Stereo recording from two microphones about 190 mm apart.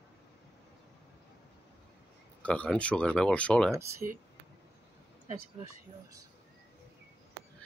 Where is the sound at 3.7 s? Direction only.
15° right (ahead or behind).